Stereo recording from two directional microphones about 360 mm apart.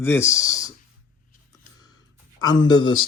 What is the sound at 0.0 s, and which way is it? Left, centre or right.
Speech, centre.